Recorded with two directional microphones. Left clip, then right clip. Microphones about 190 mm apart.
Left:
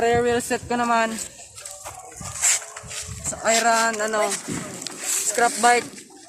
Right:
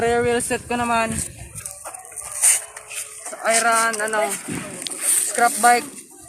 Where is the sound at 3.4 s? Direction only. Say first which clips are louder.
Right 1 dB; 40° left (ahead or behind).